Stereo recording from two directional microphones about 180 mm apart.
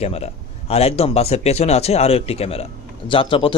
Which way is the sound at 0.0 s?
35° left (ahead or behind).